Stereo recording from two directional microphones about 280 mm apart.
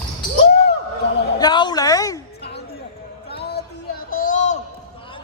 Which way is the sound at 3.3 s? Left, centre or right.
Left.